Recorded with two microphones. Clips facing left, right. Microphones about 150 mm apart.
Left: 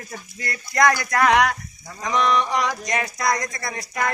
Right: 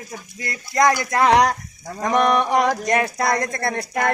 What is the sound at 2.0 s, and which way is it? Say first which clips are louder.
Speech: right 3 dB; 55° right (ahead or behind).